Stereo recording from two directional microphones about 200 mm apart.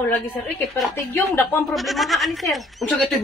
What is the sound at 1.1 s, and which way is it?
Speech, 10° left (ahead or behind).